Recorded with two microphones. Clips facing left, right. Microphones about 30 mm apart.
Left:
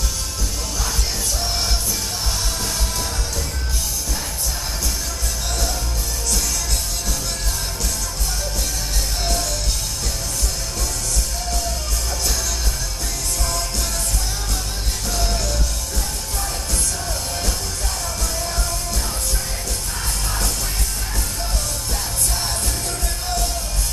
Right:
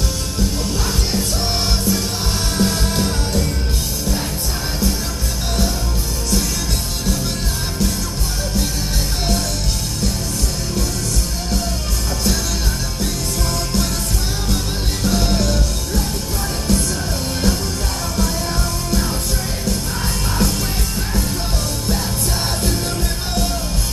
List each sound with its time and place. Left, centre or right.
2.5 s music: right
13.0 s music: centre
15.0 s music: centre